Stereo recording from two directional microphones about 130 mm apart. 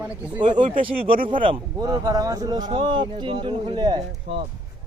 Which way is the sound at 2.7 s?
40° right (ahead or behind).